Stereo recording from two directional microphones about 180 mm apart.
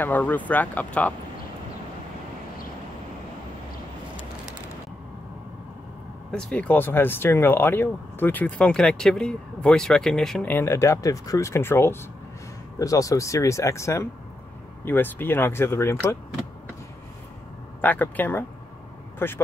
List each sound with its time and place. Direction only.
0.0 s speech: 10° left (ahead or behind)
6.3 s speech: 5° left (ahead or behind)
17.8 s speech: 10° left (ahead or behind)